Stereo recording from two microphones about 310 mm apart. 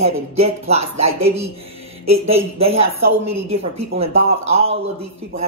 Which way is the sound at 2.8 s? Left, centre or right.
Right.